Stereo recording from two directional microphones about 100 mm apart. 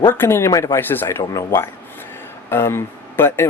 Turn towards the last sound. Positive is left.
turn(degrees=25)  # may be behind; listen again after turning